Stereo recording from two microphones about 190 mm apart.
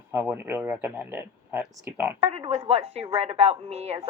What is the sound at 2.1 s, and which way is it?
A woman's voice, 30° right (ahead or behind).